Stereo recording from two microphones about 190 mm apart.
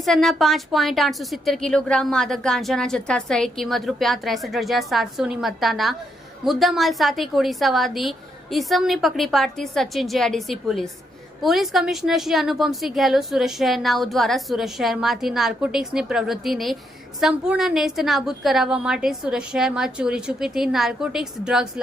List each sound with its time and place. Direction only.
0.0 s a woman's voice: centre (ahead or behind)